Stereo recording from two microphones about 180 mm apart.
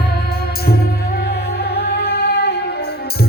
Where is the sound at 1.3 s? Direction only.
65° left (ahead or behind).